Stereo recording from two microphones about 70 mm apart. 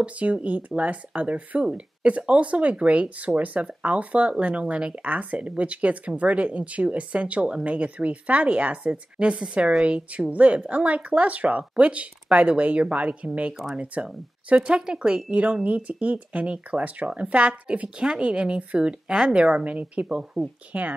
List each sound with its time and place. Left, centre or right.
0.0 s speech: centre